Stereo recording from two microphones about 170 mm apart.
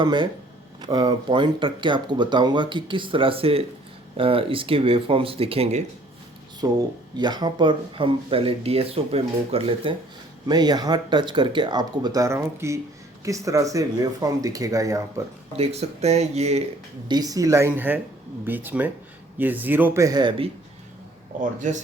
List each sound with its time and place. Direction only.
0.0 s speech: 25° right (ahead or behind)
6.6 s speech: 20° right (ahead or behind)
15.5 s speech: 40° right (ahead or behind)
17.1 s speech: 20° right (ahead or behind)